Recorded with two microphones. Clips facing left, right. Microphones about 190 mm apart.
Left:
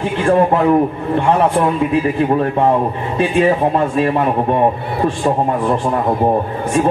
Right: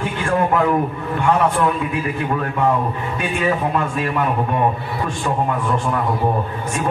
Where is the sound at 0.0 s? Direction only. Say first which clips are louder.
Left 6 dB; 30° left (ahead or behind).